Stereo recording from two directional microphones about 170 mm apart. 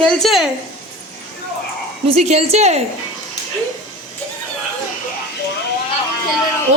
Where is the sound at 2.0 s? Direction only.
40° right (ahead or behind).